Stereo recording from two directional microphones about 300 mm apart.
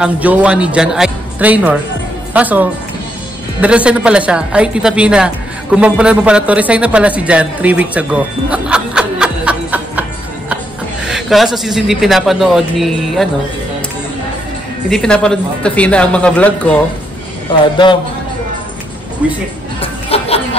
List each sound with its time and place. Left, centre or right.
0.0 s a man's voice: centre
11.1 s a man's voice: centre
14.9 s a man's voice: centre
19.8 s music: centre